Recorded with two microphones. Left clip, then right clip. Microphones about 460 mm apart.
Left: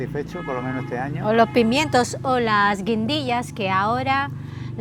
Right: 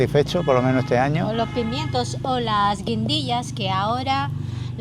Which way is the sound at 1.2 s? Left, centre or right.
Left.